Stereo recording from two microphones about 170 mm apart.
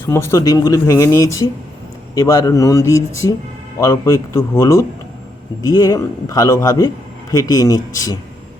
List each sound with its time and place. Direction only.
0.0 s a man's voice: 15° left (ahead or behind)